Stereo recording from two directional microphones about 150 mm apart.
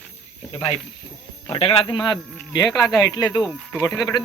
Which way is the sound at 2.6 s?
Centre (ahead or behind).